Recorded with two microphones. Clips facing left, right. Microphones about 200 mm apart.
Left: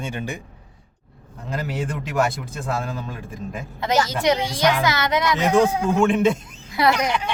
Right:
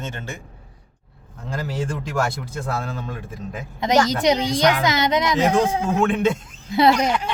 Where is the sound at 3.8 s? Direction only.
20° right (ahead or behind).